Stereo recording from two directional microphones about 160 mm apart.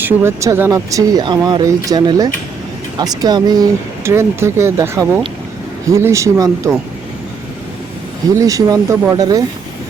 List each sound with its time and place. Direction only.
0.0 s speech: 15° right (ahead or behind)
8.4 s speech: 20° right (ahead or behind)